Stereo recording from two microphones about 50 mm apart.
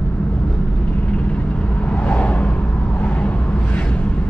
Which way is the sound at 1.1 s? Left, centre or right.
Left.